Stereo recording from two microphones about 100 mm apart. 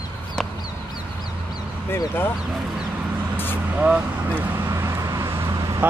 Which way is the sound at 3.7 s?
15° right (ahead or behind).